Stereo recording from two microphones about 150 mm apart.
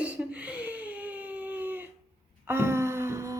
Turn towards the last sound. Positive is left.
turn(degrees=-20)  # may be behind; listen again after turning